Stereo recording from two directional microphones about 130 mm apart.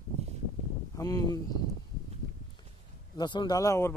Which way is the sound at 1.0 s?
25° left (ahead or behind).